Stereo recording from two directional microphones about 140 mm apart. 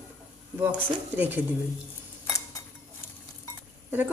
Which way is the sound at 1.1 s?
15° right (ahead or behind).